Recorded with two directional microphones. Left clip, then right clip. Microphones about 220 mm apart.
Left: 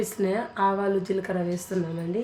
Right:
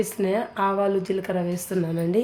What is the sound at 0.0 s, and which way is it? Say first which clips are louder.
Speech: right 2 dB; 20° right (ahead or behind).